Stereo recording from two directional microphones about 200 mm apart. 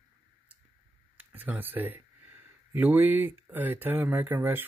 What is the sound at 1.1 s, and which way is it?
Speech, 10° right (ahead or behind).